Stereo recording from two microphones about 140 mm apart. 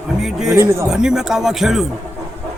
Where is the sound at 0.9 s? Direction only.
5° right (ahead or behind).